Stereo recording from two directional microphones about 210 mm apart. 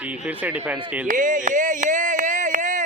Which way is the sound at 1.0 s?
40° right (ahead or behind).